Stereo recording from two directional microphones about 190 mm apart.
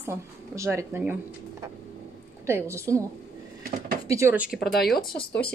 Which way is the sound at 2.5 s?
15° right (ahead or behind).